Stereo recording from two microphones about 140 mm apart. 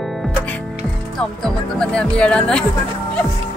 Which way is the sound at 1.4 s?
5° left (ahead or behind).